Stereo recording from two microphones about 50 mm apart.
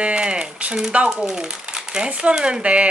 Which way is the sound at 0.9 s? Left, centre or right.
Right.